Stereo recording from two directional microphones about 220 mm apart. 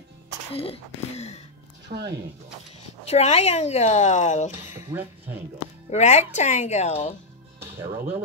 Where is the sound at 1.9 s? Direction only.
35° right (ahead or behind).